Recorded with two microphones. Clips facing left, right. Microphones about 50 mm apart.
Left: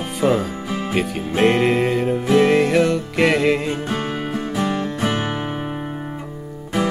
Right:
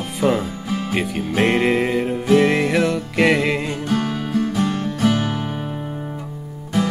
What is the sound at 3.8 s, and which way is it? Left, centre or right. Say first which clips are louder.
Music: right 2 dB; left.